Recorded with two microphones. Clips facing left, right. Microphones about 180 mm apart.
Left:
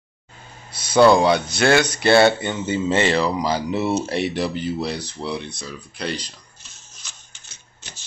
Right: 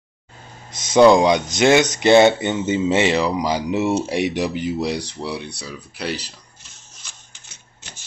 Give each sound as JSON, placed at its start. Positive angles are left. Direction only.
{"t": 0.8, "sound": "speech", "side_deg": -15}